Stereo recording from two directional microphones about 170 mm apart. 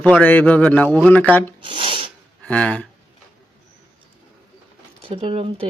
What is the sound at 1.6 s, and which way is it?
Filing, 30° right (ahead or behind).